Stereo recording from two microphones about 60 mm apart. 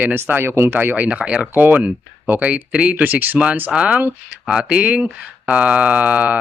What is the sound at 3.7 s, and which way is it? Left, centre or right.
Speech, centre.